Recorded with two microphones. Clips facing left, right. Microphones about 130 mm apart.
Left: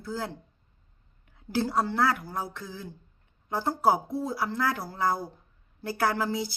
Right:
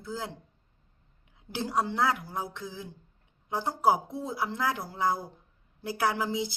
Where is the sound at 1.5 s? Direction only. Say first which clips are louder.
Left 3 dB; 15° right (ahead or behind).